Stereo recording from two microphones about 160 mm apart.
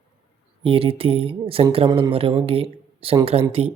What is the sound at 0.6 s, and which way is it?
Speech, 35° right (ahead or behind).